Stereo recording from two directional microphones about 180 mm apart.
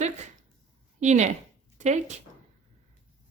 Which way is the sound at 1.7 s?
40° right (ahead or behind).